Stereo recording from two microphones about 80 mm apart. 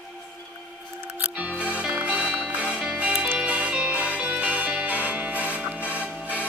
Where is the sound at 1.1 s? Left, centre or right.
Centre.